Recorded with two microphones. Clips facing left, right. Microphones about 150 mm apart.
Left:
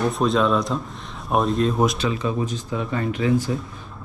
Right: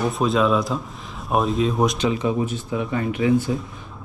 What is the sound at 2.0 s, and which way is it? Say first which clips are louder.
A man's voice: right 2 dB; 20° right (ahead or behind).